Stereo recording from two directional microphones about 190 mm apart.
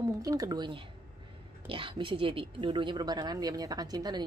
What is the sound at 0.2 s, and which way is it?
Speech, 20° right (ahead or behind).